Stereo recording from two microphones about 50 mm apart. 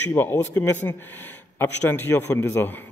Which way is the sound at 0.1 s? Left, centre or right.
Left.